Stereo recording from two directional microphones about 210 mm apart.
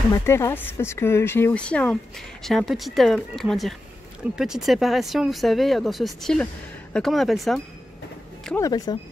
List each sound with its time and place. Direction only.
0.1 s speech: 10° left (ahead or behind)
8.5 s speech: 15° left (ahead or behind)